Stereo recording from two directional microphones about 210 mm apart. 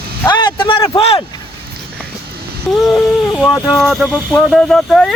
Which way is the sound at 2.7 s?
Centre (ahead or behind).